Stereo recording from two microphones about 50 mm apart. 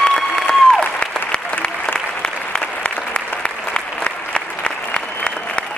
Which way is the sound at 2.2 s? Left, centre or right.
Left.